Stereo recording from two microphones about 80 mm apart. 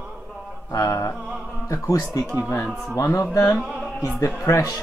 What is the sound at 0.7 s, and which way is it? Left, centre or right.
Speech, left.